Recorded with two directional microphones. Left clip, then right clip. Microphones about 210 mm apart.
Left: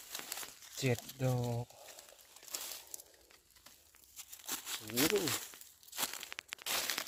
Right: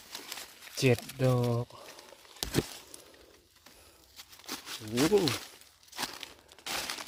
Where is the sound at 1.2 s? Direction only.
15° right (ahead or behind).